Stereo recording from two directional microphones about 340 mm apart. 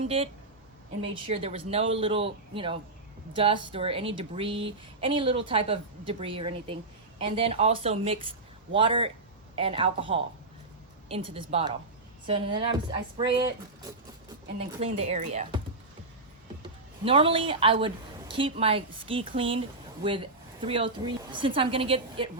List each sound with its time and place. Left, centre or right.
0.2 s a woman's voice: centre
14.8 s speech: centre
16.6 s a woman's voice: centre